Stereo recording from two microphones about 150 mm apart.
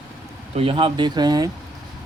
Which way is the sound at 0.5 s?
40° right (ahead or behind).